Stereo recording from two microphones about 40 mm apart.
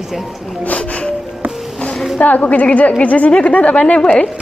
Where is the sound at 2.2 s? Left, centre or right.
Left.